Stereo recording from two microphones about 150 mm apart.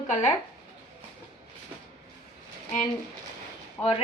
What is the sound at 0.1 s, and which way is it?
Speech, 50° left (ahead or behind).